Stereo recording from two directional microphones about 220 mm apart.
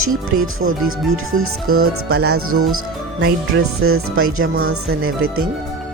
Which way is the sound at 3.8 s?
75° right (ahead or behind).